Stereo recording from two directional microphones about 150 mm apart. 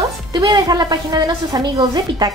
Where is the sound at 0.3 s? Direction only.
30° right (ahead or behind).